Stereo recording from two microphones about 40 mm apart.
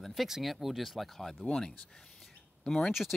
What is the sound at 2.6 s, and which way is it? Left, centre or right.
Speech, centre.